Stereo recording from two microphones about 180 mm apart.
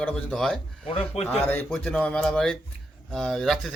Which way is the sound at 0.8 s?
35° left (ahead or behind).